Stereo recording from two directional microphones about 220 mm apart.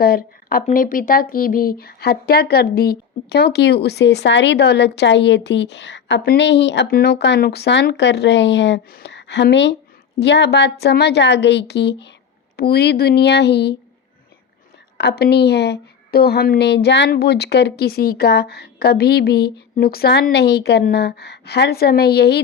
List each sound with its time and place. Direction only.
0.0 s speech: 40° left (ahead or behind)
14.9 s speech: 45° left (ahead or behind)